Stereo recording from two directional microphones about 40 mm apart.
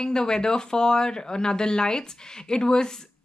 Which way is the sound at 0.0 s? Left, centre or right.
Centre.